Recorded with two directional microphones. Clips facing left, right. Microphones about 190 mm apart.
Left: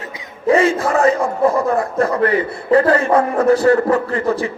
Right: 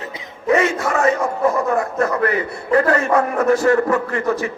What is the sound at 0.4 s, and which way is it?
A man's voice, 30° left (ahead or behind).